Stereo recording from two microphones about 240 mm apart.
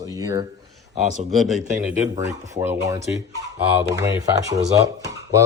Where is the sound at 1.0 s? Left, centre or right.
Right.